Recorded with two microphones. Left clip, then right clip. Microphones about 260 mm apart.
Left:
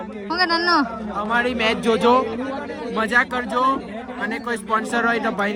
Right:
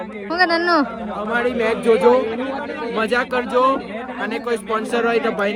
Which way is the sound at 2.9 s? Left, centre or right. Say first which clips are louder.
Even; centre.